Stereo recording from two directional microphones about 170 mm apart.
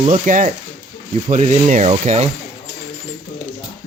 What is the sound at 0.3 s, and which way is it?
Speech, 50° right (ahead or behind).